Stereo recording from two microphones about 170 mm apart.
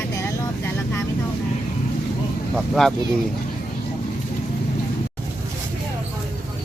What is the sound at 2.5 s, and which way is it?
Speech, centre (ahead or behind).